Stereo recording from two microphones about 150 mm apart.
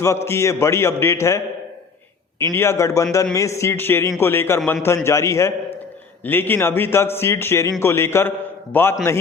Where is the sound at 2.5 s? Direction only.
15° left (ahead or behind).